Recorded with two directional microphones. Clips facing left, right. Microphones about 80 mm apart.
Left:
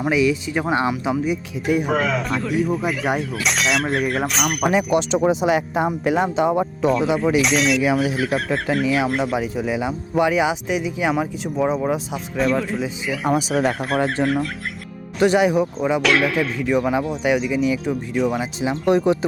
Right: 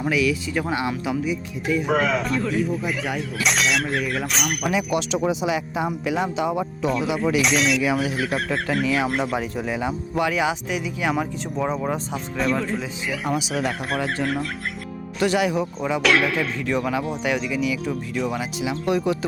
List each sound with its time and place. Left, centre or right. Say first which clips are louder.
0.0 s speech: left 3 dB; left
1.6 s speech: left 3 dB; left
1.9 s speech: even; centre
4.7 s speech: left 4 dB; left
6.8 s speech: left 4 dB; centre
10.2 s speech: left 4 dB; left
11.1 s speech: left 2 dB; centre
15.2 s speech: left 5 dB; left
16.0 s speech: even; centre
16.6 s speech: left 5 dB; centre
18.6 s speech: left 5 dB; left